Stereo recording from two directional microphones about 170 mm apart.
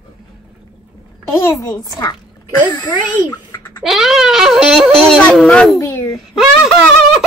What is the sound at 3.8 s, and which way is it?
Speech, centre (ahead or behind).